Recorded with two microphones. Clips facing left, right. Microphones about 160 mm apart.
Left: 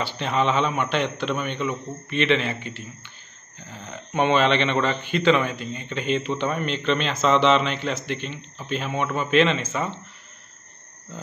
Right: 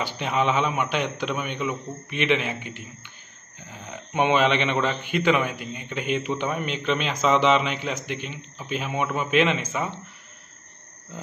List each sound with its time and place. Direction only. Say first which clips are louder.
0.0 s a man's voice: left 1 dB; 10° right (ahead or behind)